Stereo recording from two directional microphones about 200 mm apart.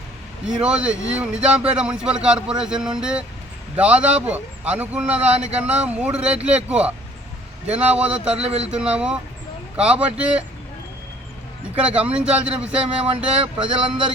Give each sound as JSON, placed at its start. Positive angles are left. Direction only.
{"t": 0.4, "sound": "a man's voice", "side_deg": -5}
{"t": 8.4, "sound": "speech", "side_deg": -30}
{"t": 8.6, "sound": "a man's voice", "side_deg": -5}
{"t": 11.8, "sound": "a man's voice", "side_deg": -5}
{"t": 13.1, "sound": "speech", "side_deg": -30}